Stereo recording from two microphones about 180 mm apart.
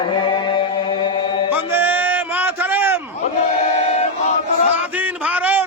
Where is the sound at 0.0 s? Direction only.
25° left (ahead or behind).